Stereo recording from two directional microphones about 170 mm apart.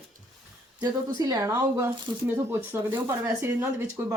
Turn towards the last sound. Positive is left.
turn(degrees=-15)  # may be behind; listen again after turning